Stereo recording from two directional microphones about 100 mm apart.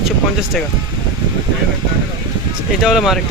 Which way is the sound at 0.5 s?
Centre (ahead or behind).